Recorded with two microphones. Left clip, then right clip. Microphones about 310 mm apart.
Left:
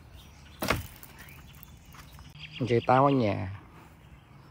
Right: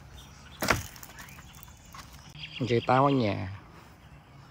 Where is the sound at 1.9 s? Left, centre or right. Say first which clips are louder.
Right 4 dB; right.